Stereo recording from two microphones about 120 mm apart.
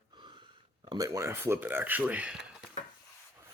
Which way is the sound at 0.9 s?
30° right (ahead or behind).